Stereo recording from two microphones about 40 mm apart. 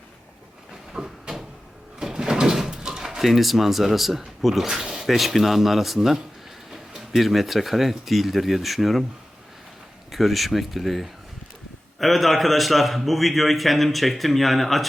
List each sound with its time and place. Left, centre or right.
0.9 s a sound: centre
2.0 s door: centre
4.7 s a man's voice: centre
7.2 s a man's voice: centre
10.1 s a man's voice: centre